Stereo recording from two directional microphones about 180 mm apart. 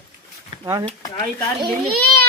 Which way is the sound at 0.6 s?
20° right (ahead or behind).